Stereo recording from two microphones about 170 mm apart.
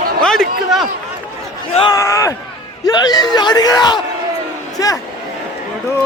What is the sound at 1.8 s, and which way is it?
Speech, 25° left (ahead or behind).